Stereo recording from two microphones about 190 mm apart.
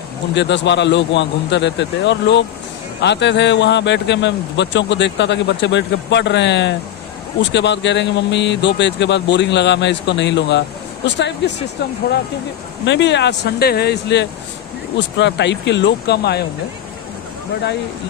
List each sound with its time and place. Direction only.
0.3 s a man's voice: 70° left (ahead or behind)
12.8 s speech: 70° left (ahead or behind)